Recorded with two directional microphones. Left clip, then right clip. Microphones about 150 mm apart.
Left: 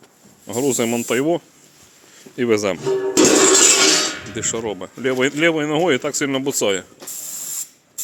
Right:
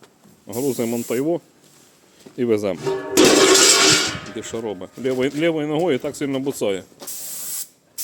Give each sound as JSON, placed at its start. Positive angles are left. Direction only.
{"t": 0.4, "sound": "speech", "side_deg": 5}
{"t": 2.3, "sound": "speech", "side_deg": -10}
{"t": 2.8, "sound": "music", "side_deg": 60}
{"t": 4.4, "sound": "speech", "side_deg": 0}